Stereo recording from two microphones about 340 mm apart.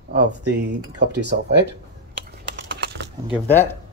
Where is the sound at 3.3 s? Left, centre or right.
Centre.